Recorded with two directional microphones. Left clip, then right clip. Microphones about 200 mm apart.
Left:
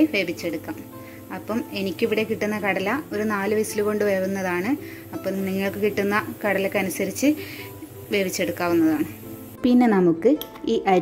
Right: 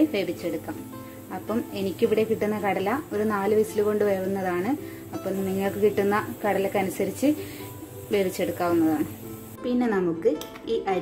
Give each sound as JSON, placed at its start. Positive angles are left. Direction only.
{"t": 0.1, "sound": "a woman's voice", "side_deg": 5}
{"t": 9.6, "sound": "a child's voice", "side_deg": 40}